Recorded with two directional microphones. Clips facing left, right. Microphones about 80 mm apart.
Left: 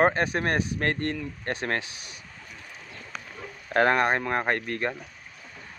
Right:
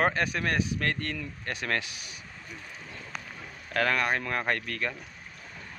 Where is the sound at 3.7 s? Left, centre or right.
Left.